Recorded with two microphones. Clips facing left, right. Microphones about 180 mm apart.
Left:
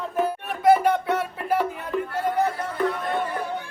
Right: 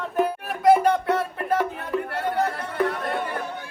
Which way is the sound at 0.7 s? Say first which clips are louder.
Right 1 dB; centre (ahead or behind).